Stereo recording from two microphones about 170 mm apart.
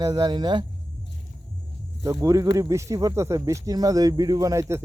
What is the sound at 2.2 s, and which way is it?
Speech, 20° right (ahead or behind).